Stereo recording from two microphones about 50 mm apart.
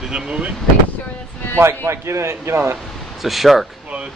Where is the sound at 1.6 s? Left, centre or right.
Right.